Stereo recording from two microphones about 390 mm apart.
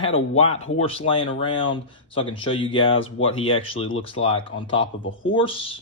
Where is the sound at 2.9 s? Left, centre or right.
Left.